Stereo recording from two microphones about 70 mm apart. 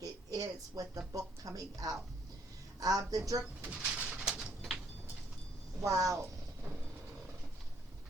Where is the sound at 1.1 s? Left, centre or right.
Right.